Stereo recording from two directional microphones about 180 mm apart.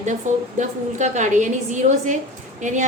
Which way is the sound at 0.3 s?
45° right (ahead or behind).